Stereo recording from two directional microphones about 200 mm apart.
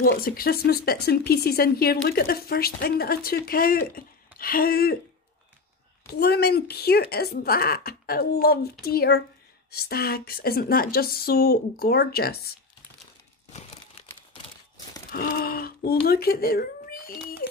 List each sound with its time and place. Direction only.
0.1 s speech: 45° left (ahead or behind)
6.1 s speech: 50° left (ahead or behind)
15.0 s speech: 45° left (ahead or behind)